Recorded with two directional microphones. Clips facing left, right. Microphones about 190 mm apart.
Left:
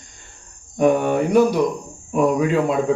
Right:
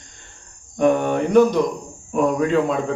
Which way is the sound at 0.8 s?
10° left (ahead or behind).